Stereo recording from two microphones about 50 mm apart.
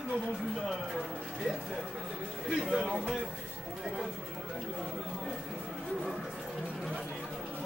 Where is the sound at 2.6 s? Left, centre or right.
Centre.